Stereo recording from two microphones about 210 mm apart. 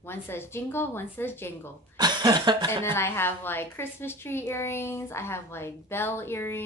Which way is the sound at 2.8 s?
10° left (ahead or behind).